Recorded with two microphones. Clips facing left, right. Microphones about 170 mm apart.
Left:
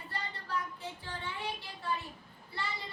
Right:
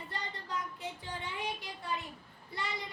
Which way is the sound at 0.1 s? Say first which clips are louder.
Left 3 dB; 20° right (ahead or behind).